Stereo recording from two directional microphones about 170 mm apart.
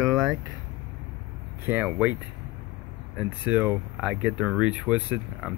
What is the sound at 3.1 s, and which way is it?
Speech, 10° right (ahead or behind).